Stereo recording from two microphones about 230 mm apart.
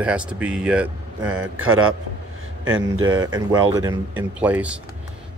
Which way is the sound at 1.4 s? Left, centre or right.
Right.